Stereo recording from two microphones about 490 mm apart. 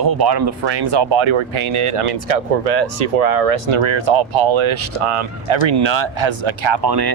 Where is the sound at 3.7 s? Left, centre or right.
Right.